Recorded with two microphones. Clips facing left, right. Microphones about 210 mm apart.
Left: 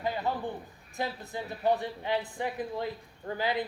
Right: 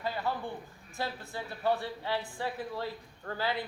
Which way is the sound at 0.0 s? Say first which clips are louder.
Left 3 dB; 20° left (ahead or behind).